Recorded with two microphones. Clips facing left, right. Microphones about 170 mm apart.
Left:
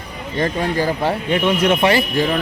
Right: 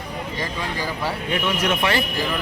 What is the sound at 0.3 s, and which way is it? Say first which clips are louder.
Speech: left 11 dB; 50° left (ahead or behind).